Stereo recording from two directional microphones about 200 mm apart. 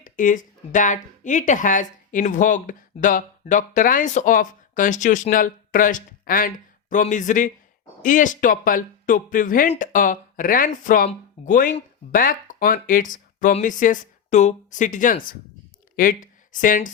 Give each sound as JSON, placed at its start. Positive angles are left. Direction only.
{"t": 0.0, "sound": "speech", "side_deg": 40}